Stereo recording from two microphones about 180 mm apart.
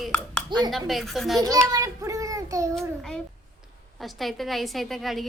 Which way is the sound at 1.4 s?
20° right (ahead or behind).